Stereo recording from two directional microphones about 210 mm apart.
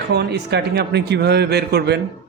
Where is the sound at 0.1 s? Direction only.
50° right (ahead or behind).